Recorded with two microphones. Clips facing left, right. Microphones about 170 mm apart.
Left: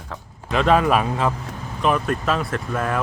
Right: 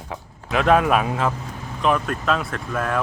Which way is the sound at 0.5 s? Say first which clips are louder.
Even; 5° right (ahead or behind).